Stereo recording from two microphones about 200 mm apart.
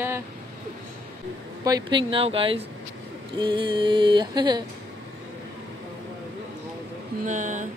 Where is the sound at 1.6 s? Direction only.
20° right (ahead or behind).